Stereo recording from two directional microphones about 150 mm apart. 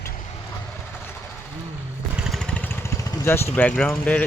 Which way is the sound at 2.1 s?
Centre (ahead or behind).